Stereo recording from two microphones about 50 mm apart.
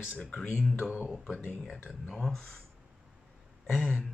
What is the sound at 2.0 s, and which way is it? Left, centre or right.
Speech, centre.